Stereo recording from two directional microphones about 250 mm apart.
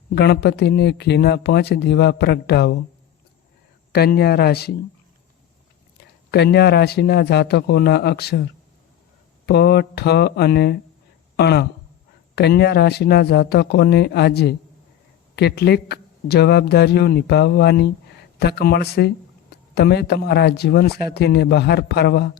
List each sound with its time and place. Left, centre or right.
0.1 s speech: left
3.9 s speech: left
6.3 s speech: left
9.5 s speech: left